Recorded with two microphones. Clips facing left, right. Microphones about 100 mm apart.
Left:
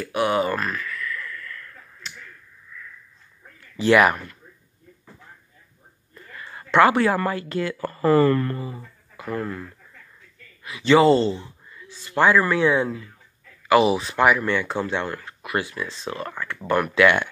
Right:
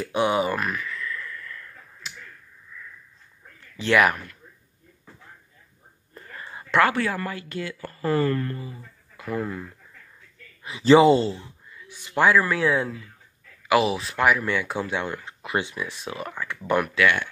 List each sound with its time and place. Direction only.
0.0 s a sound: 20° right (ahead or behind)
3.7 s speech: 5° left (ahead or behind)
6.1 s whispering: 30° right (ahead or behind)
6.6 s a sound: 5° right (ahead or behind)
7.2 s speech: 40° left (ahead or behind)
8.3 s speech: 90° left
8.5 s speech: 50° left (ahead or behind)
9.3 s speech: 5° right (ahead or behind)
10.6 s a man's voice: 30° right (ahead or behind)
11.0 s speech: 15° right (ahead or behind)
11.2 s a sound: centre (ahead or behind)
11.9 s a sound: 15° right (ahead or behind)
12.3 s speech: centre (ahead or behind)
16.9 s speech: 25° left (ahead or behind)